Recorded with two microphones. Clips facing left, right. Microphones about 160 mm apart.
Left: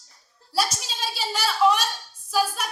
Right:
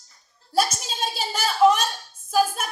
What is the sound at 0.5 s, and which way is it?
A woman's voice, 45° right (ahead or behind).